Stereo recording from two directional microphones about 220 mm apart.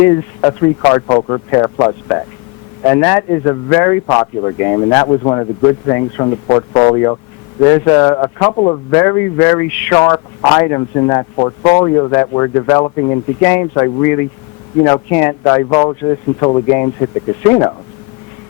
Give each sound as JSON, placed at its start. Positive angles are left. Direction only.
{"t": 0.0, "sound": "a man's voice", "side_deg": 15}